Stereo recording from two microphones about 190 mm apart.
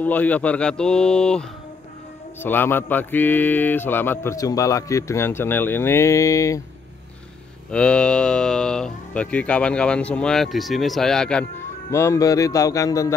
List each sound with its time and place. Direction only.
0.0 s speech: 10° left (ahead or behind)
2.4 s mantra: 10° left (ahead or behind)
7.7 s speech: 5° left (ahead or behind)
11.9 s mantra: 15° left (ahead or behind)